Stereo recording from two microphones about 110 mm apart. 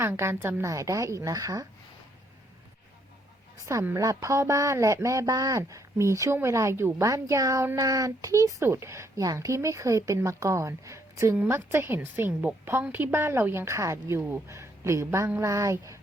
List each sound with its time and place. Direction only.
0.0 s speech: 20° right (ahead or behind)
3.9 s speech: 30° right (ahead or behind)